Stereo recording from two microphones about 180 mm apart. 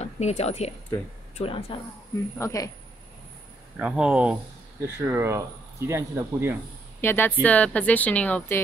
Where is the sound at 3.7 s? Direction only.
5° right (ahead or behind).